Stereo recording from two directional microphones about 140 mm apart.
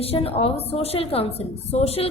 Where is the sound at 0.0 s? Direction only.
45° left (ahead or behind).